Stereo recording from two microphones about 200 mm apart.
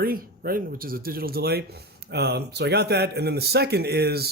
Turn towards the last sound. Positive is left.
turn(degrees=-50)  # may be behind; listen again after turning